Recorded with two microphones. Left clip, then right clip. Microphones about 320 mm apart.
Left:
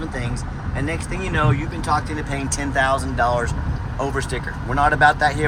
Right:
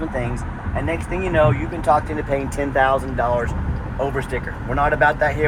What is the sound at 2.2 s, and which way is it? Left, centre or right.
Speech, centre.